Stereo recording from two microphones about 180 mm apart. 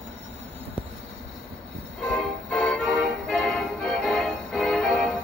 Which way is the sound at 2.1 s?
5° left (ahead or behind).